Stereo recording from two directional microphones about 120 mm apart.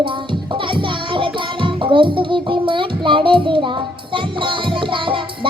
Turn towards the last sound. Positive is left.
turn(degrees=-45)  # may be behind; listen again after turning